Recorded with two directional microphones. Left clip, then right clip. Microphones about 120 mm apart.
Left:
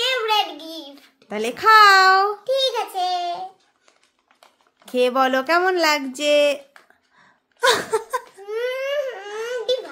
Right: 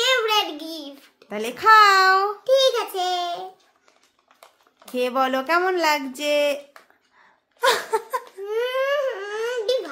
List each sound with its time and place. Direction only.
0.0 s child singing: 25° right (ahead or behind)
1.3 s speech: 30° left (ahead or behind)
2.4 s babbling: 20° right (ahead or behind)
4.9 s speech: 30° left (ahead or behind)
7.2 s a sound: 25° left (ahead or behind)
8.5 s baby cry: 30° right (ahead or behind)